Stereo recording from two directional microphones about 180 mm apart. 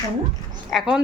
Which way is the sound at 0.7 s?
5° right (ahead or behind).